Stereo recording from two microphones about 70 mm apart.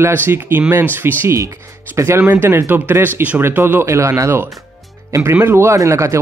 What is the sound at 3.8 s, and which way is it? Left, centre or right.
Speech, right.